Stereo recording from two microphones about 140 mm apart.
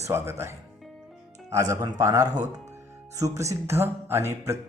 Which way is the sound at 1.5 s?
25° right (ahead or behind).